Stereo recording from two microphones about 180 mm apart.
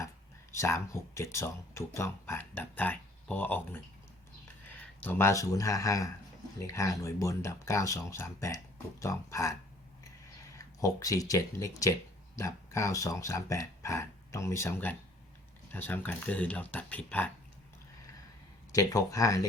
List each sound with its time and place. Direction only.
0.5 s speech: 15° left (ahead or behind)
5.0 s speech: 15° left (ahead or behind)
10.8 s speech: 20° left (ahead or behind)
18.7 s speech: 20° left (ahead or behind)